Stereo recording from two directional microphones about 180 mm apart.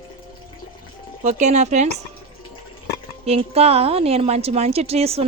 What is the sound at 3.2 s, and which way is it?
Speech, 35° right (ahead or behind).